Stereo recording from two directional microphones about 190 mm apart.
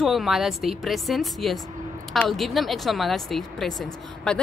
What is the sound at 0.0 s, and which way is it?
Speech, centre (ahead or behind).